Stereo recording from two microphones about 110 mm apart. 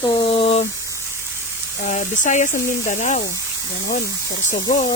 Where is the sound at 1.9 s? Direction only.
90° left.